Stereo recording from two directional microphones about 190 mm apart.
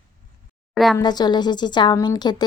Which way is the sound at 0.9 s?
20° left (ahead or behind).